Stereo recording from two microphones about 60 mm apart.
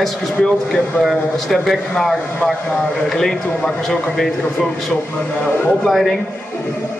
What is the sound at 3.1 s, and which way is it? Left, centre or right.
Speech, centre.